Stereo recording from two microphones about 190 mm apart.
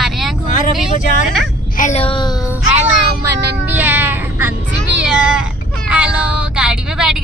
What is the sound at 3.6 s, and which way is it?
Meow, 10° right (ahead or behind).